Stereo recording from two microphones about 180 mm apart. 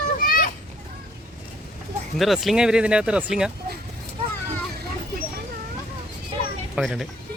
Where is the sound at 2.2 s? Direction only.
Centre (ahead or behind).